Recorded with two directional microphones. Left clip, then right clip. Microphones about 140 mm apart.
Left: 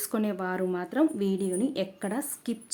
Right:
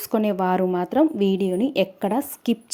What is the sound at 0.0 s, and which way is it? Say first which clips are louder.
A woman's voice: right 9 dB; 30° right (ahead or behind).